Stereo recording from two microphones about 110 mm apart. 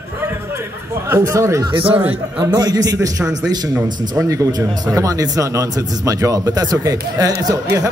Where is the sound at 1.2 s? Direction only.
25° right (ahead or behind).